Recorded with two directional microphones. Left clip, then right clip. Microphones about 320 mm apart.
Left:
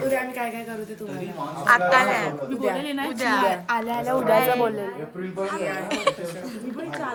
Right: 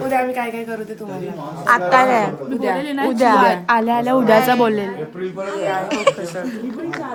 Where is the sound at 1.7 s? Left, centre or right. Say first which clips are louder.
Right 5 dB; centre.